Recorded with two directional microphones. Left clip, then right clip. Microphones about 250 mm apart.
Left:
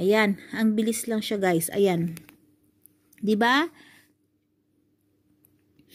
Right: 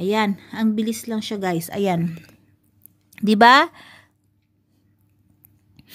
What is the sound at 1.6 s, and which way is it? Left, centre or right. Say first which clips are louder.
Speech: right 1 dB; centre.